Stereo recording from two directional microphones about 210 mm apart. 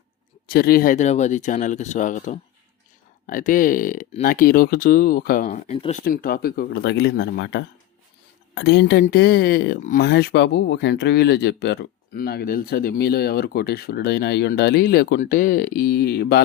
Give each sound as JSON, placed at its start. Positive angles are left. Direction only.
{"t": 0.4, "sound": "speech", "side_deg": 45}
{"t": 5.5, "sound": "speech", "side_deg": 30}
{"t": 6.1, "sound": "speech", "side_deg": 45}